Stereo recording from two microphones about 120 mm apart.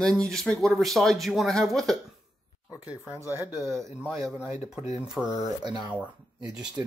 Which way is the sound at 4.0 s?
10° right (ahead or behind).